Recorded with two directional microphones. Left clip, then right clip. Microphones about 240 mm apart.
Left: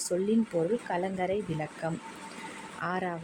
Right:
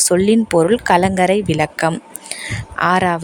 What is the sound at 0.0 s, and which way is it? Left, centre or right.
A woman's voice, right.